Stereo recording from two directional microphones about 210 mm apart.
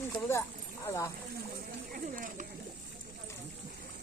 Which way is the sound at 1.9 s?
40° right (ahead or behind).